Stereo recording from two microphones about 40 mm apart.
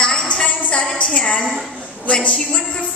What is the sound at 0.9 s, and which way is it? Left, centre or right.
A woman's voice, left.